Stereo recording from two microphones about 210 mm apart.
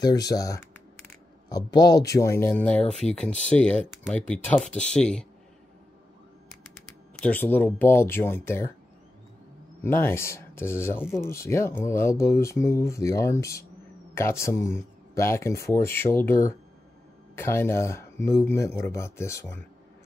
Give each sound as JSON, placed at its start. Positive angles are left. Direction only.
{"t": 0.0, "sound": "speech", "side_deg": 20}
{"t": 7.2, "sound": "speech", "side_deg": 10}
{"t": 9.8, "sound": "speech", "side_deg": 10}